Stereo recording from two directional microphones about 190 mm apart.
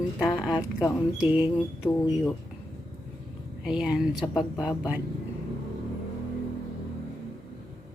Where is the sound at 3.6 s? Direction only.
5° right (ahead or behind).